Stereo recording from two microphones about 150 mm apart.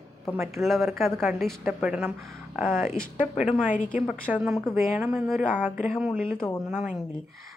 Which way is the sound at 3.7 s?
65° left (ahead or behind).